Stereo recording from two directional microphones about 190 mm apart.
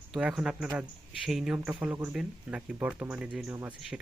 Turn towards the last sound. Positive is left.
turn(degrees=-10)  # may be behind; listen again after turning